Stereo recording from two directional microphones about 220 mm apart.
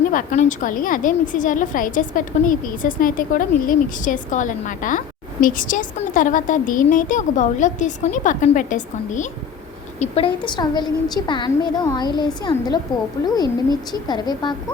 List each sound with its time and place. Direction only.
0.1 s a woman's voice: 35° left (ahead or behind); by 14.5 s 20° left (ahead or behind)